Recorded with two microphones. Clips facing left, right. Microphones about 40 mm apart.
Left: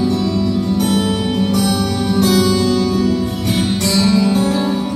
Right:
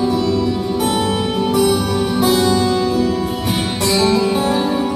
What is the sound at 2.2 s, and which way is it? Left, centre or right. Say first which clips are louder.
Music: left 1 dB; centre.